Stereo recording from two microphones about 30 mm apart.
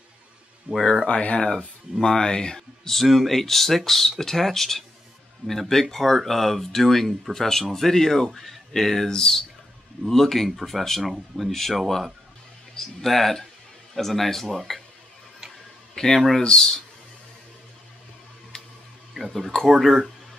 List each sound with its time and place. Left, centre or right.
0.7 s speech: right
1.0 s speech: left
2.0 s speech: left
2.9 s speech: centre
10.0 s speech: centre
11.1 s speech: centre
11.5 s speech: centre
15.9 s speech: centre
16.2 s speech: centre
16.4 s speech: left
18.5 s a sound: left
19.2 s speech: centre
19.7 s speech: centre